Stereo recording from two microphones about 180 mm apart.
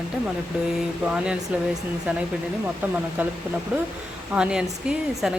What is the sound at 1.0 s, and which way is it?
Speech, 5° right (ahead or behind).